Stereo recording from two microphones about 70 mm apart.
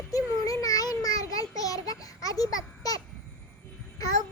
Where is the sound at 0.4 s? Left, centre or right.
Left.